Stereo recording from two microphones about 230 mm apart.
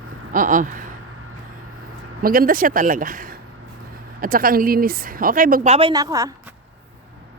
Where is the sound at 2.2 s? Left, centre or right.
Right; by 6.3 s centre.